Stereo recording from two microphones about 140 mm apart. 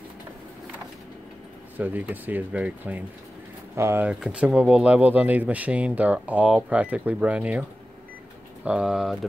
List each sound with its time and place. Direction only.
1.8 s speech: 10° right (ahead or behind)
4.1 s speech: 5° right (ahead or behind)
8.6 s speech: 5° right (ahead or behind)